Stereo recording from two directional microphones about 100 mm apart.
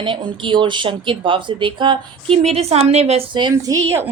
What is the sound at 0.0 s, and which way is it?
Speech, 55° right (ahead or behind).